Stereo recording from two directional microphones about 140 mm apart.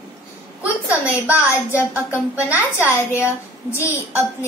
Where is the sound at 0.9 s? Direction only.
10° right (ahead or behind).